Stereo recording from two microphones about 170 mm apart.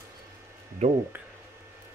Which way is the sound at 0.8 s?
45° right (ahead or behind).